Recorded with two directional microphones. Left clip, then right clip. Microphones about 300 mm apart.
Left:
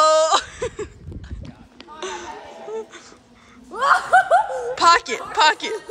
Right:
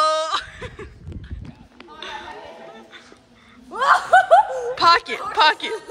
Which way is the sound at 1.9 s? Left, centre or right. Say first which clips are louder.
Left 2 dB; centre.